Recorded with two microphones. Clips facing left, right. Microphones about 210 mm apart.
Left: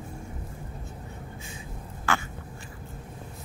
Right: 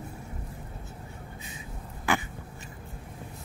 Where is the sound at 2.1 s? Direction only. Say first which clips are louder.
Right 1 dB; 15° right (ahead or behind).